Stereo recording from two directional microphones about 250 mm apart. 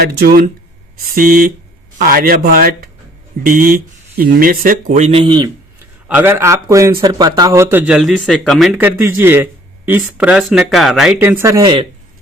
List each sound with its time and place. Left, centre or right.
0.0 s speech: right; by 5.5 s centre
6.1 s a man's voice: centre